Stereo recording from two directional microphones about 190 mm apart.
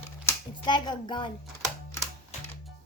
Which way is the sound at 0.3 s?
25° left (ahead or behind).